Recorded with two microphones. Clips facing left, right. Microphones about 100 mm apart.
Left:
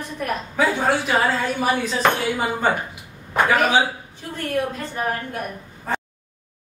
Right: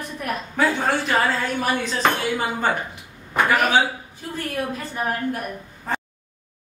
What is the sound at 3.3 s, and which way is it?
Speech, centre (ahead or behind).